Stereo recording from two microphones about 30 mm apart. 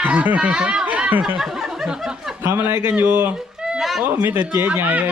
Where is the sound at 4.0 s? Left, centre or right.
Right.